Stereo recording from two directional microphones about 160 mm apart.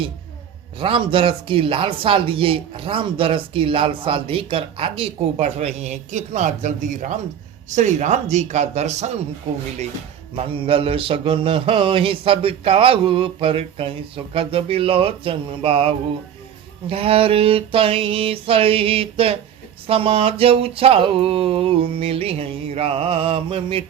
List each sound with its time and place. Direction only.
0.8 s speech: 35° right (ahead or behind)
10.3 s speech: 35° right (ahead or behind)